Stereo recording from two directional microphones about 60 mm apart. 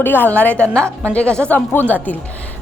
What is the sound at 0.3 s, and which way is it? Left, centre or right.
A woman's voice, left.